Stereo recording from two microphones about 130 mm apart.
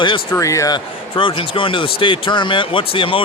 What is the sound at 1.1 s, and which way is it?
Speech, 40° left (ahead or behind).